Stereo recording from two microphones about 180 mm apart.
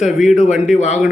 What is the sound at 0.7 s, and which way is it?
Speech, 40° left (ahead or behind).